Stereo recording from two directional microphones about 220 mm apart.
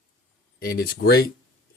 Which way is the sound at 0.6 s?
45° left (ahead or behind).